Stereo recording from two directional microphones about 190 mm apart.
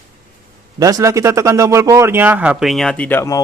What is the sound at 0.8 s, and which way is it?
Speech, 20° right (ahead or behind).